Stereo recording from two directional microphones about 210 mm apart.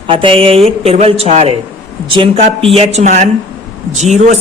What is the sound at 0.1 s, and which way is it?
A man's voice, 25° right (ahead or behind).